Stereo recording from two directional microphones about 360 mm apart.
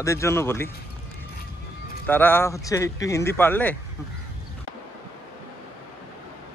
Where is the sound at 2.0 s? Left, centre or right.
Centre.